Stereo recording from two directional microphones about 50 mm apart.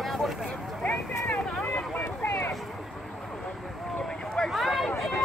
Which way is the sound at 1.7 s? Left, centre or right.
Left.